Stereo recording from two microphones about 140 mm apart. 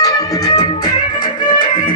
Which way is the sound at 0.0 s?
25° left (ahead or behind).